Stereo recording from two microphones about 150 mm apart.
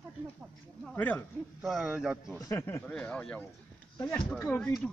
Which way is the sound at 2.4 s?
20° left (ahead or behind).